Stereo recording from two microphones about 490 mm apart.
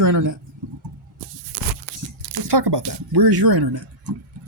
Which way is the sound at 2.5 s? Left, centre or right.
Right.